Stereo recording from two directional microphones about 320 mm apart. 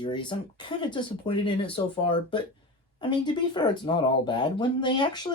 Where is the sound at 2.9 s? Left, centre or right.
Centre.